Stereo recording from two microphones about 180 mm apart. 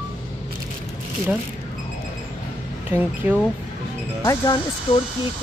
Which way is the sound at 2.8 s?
10° right (ahead or behind).